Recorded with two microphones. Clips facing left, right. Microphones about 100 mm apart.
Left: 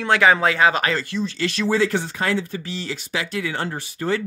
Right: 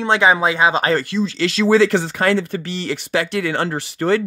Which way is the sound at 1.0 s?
90° right.